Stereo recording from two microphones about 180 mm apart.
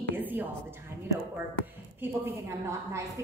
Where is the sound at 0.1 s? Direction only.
10° right (ahead or behind).